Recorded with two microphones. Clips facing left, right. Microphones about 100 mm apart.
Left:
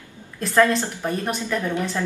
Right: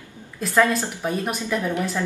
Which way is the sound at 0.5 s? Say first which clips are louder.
Left 1 dB; 10° right (ahead or behind).